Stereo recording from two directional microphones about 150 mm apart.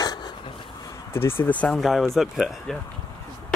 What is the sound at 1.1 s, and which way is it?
Speech, 15° left (ahead or behind).